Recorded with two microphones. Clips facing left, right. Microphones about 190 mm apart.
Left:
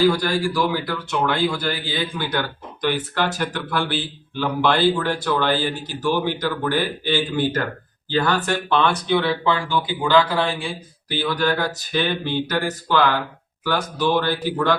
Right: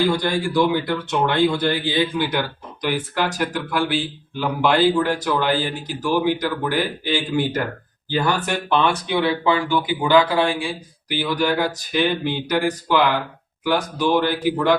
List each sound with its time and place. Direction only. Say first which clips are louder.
0.2 s speech: right 2 dB; 15° right (ahead or behind)